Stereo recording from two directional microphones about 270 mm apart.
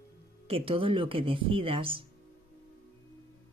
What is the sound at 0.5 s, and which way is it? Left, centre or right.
Speech, centre.